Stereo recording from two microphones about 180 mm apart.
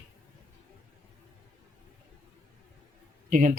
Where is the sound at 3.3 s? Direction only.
50° right (ahead or behind).